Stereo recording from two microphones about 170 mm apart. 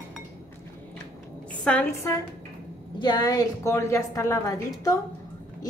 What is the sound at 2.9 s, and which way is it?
A woman's voice, 25° left (ahead or behind).